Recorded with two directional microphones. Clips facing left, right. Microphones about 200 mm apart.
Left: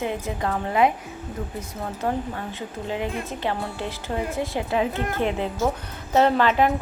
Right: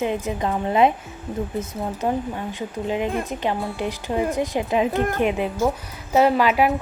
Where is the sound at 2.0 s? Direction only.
15° right (ahead or behind).